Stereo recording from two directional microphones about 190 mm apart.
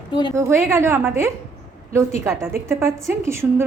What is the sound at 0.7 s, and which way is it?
A woman's voice, 15° right (ahead or behind).